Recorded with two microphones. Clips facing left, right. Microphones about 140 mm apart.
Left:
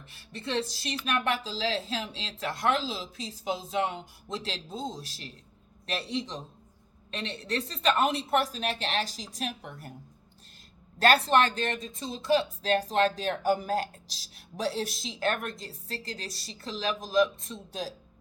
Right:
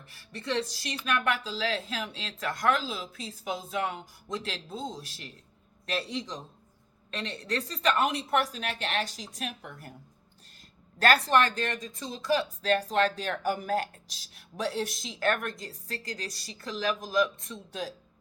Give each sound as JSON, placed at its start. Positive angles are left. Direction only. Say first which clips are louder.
{"t": 0.1, "sound": "speech", "louder": "even", "side_deg": 25}
{"t": 11.0, "sound": "speech", "louder": "left 1 dB", "side_deg": 25}